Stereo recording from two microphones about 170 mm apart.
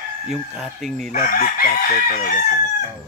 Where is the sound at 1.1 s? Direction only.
55° left (ahead or behind).